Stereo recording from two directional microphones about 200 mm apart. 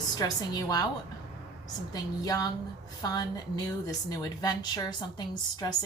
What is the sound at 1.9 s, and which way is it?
A woman's voice, 20° left (ahead or behind).